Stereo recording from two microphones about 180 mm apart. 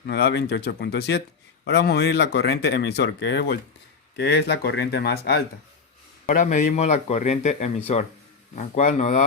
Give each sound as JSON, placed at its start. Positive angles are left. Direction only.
{"t": 0.1, "sound": "speech", "side_deg": 65}
{"t": 6.2, "sound": "a man's voice", "side_deg": 45}